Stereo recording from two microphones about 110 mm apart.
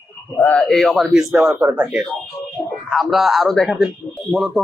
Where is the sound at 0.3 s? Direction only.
10° left (ahead or behind).